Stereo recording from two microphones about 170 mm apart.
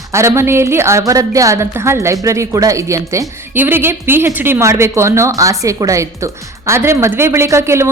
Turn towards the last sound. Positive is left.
turn(degrees=-15)  # may be behind; listen again after turning